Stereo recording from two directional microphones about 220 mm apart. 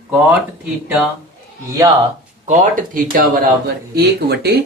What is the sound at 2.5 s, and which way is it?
Speech, 40° right (ahead or behind).